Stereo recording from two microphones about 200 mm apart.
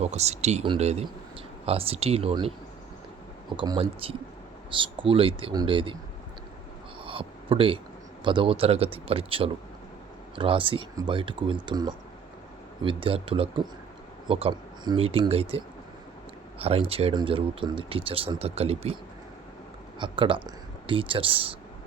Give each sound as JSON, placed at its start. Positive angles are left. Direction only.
{"t": 0.0, "sound": "speech", "side_deg": -35}
{"t": 3.6, "sound": "speech", "side_deg": -25}
{"t": 7.0, "sound": "a sound", "side_deg": -25}
{"t": 8.2, "sound": "speech", "side_deg": -25}
{"t": 20.0, "sound": "speech", "side_deg": -25}